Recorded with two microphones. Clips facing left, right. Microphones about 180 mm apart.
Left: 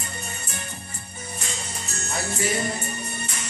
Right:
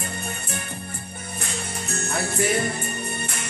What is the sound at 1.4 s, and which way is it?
Music, 55° right (ahead or behind).